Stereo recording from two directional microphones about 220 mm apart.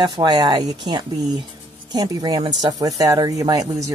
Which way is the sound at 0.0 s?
20° right (ahead or behind).